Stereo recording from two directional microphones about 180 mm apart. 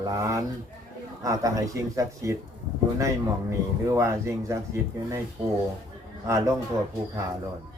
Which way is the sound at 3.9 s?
15° right (ahead or behind).